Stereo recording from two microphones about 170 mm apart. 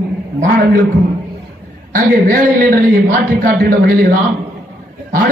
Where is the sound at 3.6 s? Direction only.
65° right (ahead or behind).